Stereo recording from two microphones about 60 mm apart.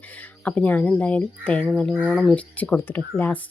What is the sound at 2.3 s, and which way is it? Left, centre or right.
Speech, left.